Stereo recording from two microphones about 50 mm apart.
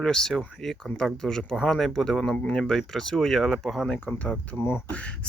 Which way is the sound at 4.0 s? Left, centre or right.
Left.